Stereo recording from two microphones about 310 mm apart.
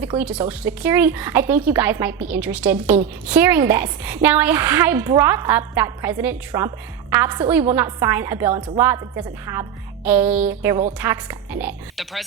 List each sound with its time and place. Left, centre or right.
0.2 s a woman's voice: centre